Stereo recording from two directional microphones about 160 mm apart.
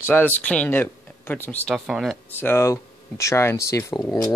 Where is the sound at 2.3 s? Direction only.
15° left (ahead or behind).